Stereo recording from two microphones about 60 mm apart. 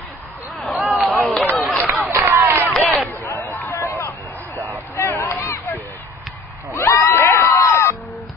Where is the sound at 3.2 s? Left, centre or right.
Left.